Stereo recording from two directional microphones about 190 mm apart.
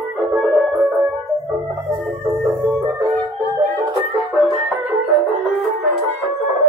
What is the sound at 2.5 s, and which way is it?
Music, 10° right (ahead or behind).